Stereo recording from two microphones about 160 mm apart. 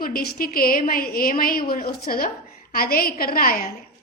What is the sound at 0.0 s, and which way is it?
A woman's voice, 65° left (ahead or behind).